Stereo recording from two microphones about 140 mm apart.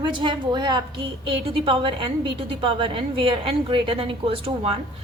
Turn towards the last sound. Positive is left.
turn(degrees=-45)  # may be behind; listen again after turning